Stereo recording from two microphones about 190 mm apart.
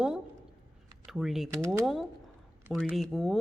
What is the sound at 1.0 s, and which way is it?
Speech, centre (ahead or behind).